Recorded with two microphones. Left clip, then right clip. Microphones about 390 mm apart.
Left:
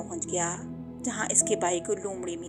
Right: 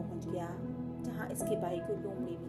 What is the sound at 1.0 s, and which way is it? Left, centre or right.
Speech, centre.